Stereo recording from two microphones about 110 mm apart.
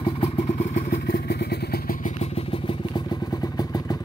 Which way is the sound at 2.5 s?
50° left (ahead or behind).